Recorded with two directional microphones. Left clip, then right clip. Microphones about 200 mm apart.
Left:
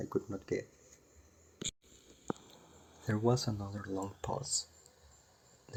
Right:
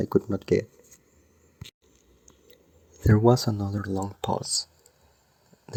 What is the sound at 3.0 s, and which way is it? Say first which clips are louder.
Speech: right 12 dB; 40° right (ahead or behind).